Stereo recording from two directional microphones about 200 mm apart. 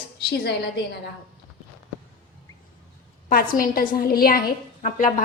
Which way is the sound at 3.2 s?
45° left (ahead or behind).